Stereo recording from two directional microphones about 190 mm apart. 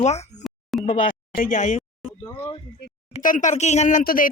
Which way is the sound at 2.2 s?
15° left (ahead or behind).